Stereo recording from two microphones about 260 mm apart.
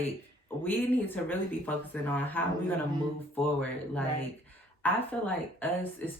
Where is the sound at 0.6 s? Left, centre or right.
Centre.